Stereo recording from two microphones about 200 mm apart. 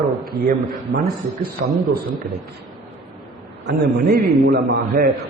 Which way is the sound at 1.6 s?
Centre (ahead or behind).